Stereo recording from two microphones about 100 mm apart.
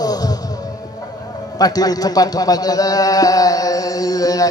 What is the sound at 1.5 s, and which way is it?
A man's voice, 40° left (ahead or behind).